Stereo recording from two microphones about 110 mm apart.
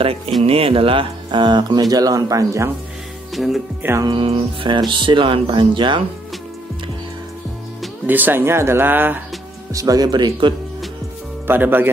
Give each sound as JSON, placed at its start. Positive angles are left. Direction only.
{"t": 0.4, "sound": "speech", "side_deg": -60}
{"t": 3.3, "sound": "speech", "side_deg": 0}
{"t": 4.0, "sound": "speech", "side_deg": -50}
{"t": 8.1, "sound": "speech", "side_deg": -15}
{"t": 9.7, "sound": "speech", "side_deg": -30}
{"t": 11.4, "sound": "speech", "side_deg": -20}